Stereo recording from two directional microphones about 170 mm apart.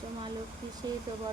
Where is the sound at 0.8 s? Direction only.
25° right (ahead or behind).